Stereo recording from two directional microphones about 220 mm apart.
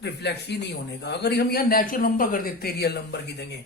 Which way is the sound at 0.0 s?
50° left (ahead or behind).